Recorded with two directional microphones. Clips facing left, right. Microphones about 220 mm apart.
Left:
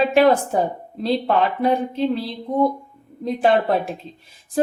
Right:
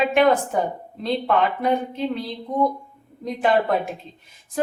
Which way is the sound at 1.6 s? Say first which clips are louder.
Left 3 dB; 30° left (ahead or behind).